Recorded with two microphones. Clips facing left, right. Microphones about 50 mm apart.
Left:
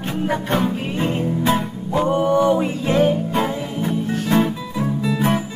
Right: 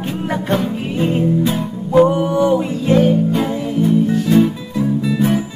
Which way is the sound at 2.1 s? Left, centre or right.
Centre.